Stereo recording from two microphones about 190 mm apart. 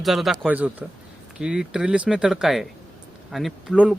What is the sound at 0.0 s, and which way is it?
Speech, centre (ahead or behind).